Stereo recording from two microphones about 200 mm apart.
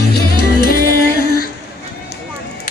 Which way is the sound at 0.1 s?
50° left (ahead or behind).